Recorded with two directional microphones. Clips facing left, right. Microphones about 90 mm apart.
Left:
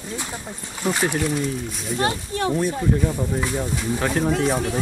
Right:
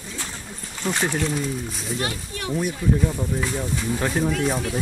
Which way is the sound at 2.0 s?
35° left (ahead or behind).